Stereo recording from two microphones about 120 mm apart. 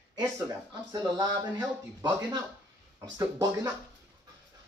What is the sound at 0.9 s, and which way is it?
Speech, 35° right (ahead or behind).